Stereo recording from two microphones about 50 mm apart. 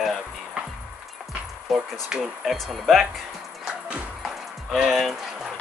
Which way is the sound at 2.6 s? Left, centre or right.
Centre.